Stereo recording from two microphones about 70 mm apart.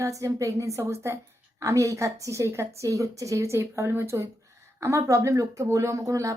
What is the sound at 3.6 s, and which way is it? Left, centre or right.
Speech, right.